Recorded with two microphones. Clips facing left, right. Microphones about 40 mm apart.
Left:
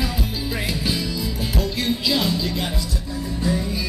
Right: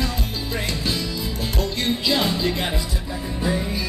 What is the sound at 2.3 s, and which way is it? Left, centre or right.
Music, centre.